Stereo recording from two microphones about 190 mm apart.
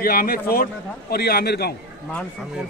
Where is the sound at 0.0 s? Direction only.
50° left (ahead or behind).